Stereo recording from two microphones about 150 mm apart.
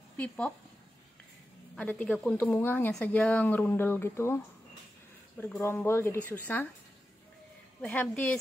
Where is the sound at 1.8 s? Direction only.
10° left (ahead or behind).